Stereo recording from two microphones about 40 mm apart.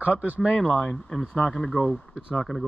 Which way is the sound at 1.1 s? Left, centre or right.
Centre.